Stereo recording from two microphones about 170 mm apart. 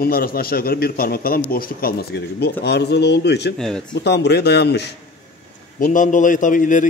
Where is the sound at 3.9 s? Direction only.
85° left.